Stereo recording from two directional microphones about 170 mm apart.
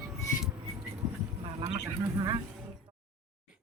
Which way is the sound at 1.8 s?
25° right (ahead or behind).